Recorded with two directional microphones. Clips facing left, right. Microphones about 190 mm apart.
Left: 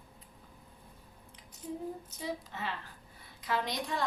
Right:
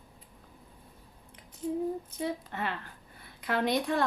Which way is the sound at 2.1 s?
60° right (ahead or behind).